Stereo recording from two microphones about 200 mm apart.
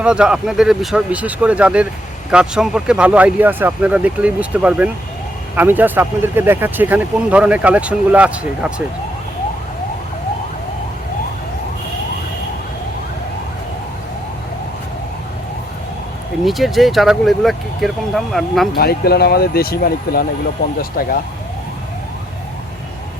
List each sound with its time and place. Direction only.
0.0 s speech: 5° right (ahead or behind)
16.4 s speech: centre (ahead or behind)
18.7 s speech: 50° left (ahead or behind)